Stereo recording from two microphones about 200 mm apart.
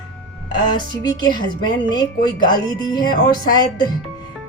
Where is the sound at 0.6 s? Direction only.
20° left (ahead or behind).